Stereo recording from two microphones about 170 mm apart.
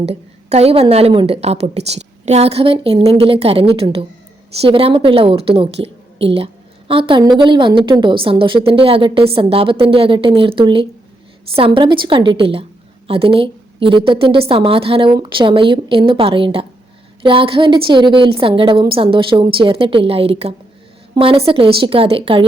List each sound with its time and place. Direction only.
0.0 s a woman's voice: 35° right (ahead or behind)